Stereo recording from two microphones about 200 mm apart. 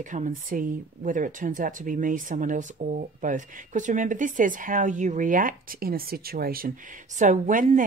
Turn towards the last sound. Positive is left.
turn(degrees=-40)  # may be behind; listen again after turning